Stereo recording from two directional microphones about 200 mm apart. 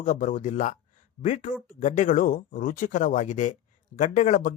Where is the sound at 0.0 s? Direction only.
40° left (ahead or behind).